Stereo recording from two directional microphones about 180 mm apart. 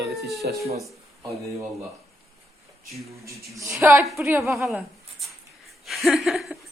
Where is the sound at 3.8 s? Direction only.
15° right (ahead or behind).